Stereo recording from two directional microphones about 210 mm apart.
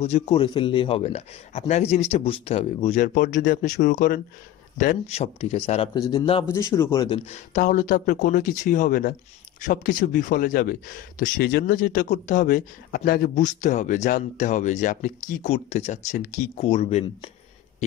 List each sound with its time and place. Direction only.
0.0 s a man's voice: 30° left (ahead or behind)
6.5 s a man's voice: 15° left (ahead or behind)
7.2 s speech: 35° left (ahead or behind)